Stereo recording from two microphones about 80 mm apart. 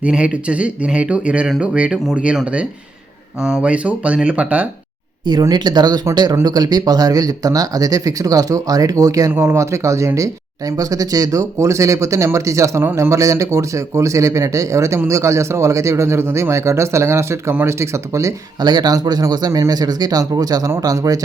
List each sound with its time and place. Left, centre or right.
0.0 s speech: centre
5.4 s speech: right
9.3 s speech: right
18.6 s speech: right